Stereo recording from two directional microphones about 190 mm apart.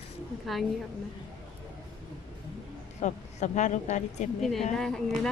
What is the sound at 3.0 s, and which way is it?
Speech, 40° left (ahead or behind).